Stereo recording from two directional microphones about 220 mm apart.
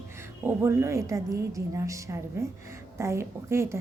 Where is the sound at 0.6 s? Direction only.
10° right (ahead or behind).